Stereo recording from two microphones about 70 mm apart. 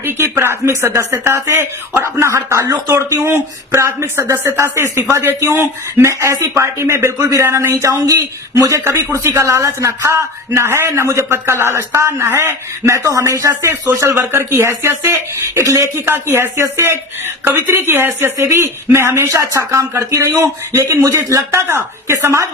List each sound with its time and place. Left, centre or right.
0.0 s a man's voice: right
8.8 s a man's voice: right
18.3 s a man's voice: right